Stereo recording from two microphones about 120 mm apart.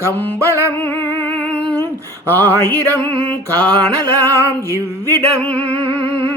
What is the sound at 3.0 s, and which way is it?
Music, 45° right (ahead or behind).